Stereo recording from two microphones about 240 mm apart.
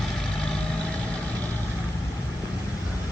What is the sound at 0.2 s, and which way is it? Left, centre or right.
Vehicle, centre.